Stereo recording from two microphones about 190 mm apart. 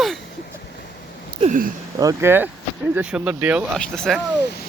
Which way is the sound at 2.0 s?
15° right (ahead or behind).